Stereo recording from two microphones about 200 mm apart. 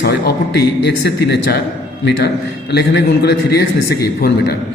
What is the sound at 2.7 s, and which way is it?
A man's voice, 60° left (ahead or behind).